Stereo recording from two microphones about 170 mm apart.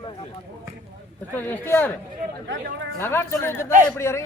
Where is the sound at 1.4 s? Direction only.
10° left (ahead or behind).